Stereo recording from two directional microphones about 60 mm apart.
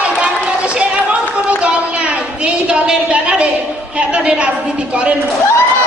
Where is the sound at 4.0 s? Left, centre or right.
Centre.